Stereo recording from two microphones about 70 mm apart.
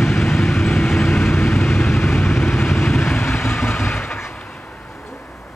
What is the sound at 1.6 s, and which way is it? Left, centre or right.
Vehicle, left.